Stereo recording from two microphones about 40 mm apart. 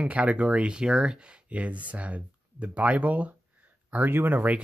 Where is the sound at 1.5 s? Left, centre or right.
Right.